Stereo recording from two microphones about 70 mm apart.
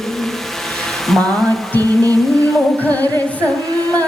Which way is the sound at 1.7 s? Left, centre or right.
Right.